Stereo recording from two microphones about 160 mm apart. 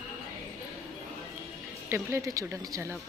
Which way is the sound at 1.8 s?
15° right (ahead or behind).